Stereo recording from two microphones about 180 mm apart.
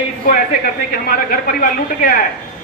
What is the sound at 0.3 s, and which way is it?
A man's voice, 55° left (ahead or behind).